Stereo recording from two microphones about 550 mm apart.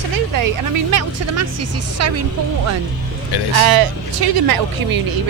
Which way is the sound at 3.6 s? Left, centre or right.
Right.